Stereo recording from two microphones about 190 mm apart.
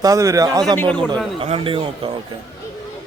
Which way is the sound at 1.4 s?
30° right (ahead or behind).